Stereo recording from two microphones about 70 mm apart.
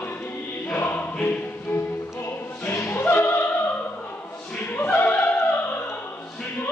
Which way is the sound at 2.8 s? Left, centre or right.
Left.